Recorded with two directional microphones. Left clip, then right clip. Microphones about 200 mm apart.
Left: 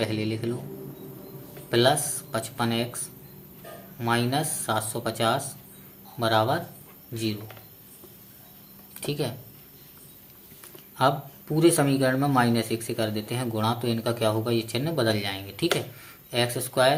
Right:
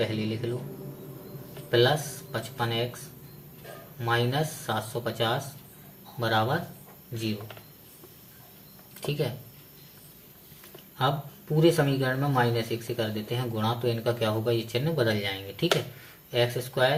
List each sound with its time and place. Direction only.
0.0 s speech: 35° left (ahead or behind)
1.7 s speech: 35° left (ahead or behind)
4.0 s speech: 35° left (ahead or behind)
9.0 s speech: 30° left (ahead or behind)
11.5 s speech: 35° left (ahead or behind)